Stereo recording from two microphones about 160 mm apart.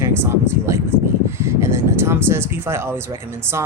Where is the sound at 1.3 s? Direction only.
15° right (ahead or behind).